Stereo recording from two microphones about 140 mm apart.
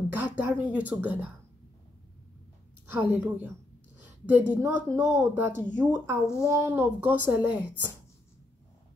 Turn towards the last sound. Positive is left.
turn(degrees=-15)  # may be behind; listen again after turning